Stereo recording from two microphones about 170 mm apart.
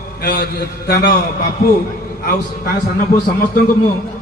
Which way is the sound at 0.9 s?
65° left (ahead or behind).